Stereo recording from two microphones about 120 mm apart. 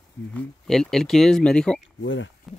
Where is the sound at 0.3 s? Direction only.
5° left (ahead or behind).